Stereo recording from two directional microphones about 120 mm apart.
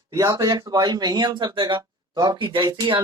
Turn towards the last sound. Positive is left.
turn(degrees=-40)  # may be behind; listen again after turning